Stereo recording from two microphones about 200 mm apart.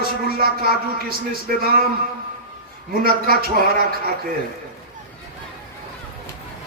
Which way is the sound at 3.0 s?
50° right (ahead or behind).